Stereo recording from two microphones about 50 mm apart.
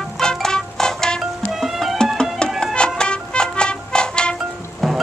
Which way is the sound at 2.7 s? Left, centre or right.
Centre.